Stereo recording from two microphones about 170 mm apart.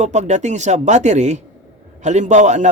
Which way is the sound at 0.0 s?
45° right (ahead or behind).